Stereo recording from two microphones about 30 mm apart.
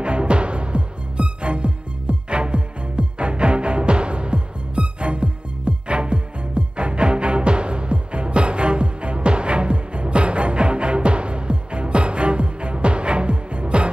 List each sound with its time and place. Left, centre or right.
0.0 s music: right